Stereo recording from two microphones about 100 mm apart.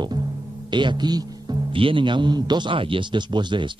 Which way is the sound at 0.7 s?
50° right (ahead or behind).